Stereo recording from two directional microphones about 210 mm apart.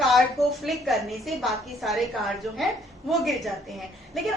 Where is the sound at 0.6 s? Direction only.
Centre (ahead or behind).